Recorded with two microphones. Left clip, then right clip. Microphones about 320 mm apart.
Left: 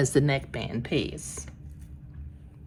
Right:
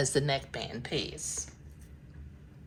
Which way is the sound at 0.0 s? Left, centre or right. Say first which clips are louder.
Left 4 dB; centre.